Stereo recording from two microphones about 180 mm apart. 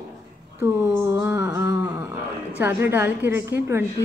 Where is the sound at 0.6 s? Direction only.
15° right (ahead or behind).